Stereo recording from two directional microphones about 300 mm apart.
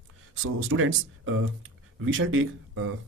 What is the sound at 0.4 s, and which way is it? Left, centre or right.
Speech, right.